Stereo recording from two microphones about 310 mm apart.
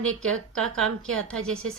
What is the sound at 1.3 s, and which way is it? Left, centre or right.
Speech, centre.